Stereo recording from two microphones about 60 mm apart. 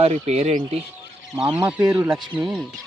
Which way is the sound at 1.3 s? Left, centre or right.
Right.